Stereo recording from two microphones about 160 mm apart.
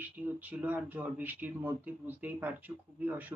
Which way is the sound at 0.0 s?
10° right (ahead or behind).